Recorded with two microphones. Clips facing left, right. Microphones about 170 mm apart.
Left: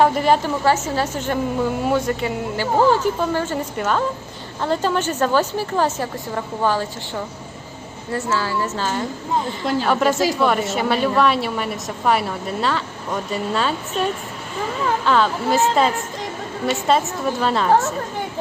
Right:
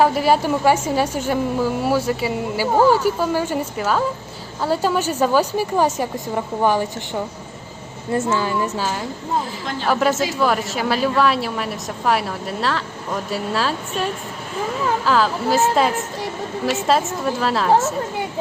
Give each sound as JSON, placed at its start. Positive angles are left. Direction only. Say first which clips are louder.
{"t": 0.0, "sound": "a woman's voice", "louder": "even", "side_deg": -5}